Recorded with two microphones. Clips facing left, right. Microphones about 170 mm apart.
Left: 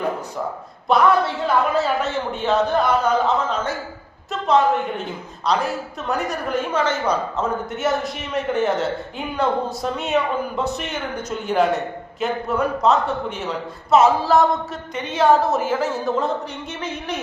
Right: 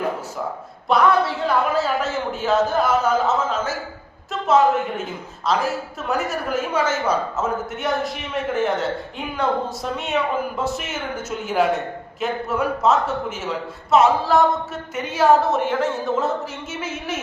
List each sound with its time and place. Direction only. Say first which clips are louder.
0.9 s a woman's voice: left 1 dB; centre (ahead or behind)